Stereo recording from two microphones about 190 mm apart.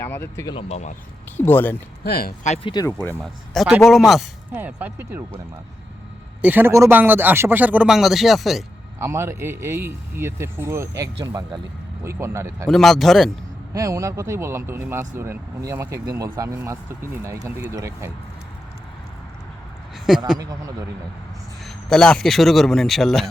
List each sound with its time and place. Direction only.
0.0 s speech: 10° left (ahead or behind)
0.5 s speech: 35° left (ahead or behind)
1.4 s speech: 10° left (ahead or behind)
2.0 s speech: 55° left (ahead or behind)
2.4 s speech: 35° left (ahead or behind)
2.7 s speech: 15° left (ahead or behind)
3.5 s a man's voice: centre (ahead or behind)
6.4 s speech: 10° right (ahead or behind)
9.0 s speech: 15° right (ahead or behind)
12.6 s a man's voice: centre (ahead or behind)
13.7 s speech: 15° right (ahead or behind)
20.1 s a man's voice: centre (ahead or behind)
20.4 s a man's voice: 20° right (ahead or behind)
21.6 s a man's voice: centre (ahead or behind)